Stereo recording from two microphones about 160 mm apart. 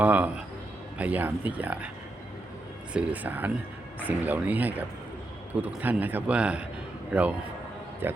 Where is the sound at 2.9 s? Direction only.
10° right (ahead or behind).